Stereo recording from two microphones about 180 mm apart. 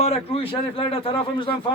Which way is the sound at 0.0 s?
35° left (ahead or behind).